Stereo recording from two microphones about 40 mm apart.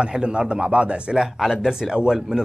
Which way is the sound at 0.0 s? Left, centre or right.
Right.